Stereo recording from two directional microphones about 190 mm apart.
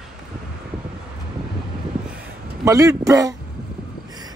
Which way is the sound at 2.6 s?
20° right (ahead or behind).